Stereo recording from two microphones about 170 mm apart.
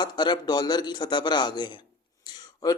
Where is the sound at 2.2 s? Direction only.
20° left (ahead or behind).